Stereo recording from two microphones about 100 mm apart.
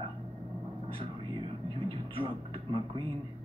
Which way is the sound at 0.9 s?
60° right (ahead or behind).